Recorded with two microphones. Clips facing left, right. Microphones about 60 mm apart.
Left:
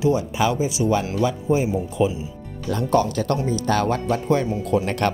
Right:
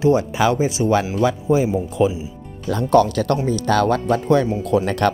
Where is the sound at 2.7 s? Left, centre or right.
Right.